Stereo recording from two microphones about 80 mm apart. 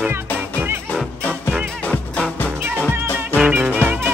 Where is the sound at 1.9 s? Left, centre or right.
Centre.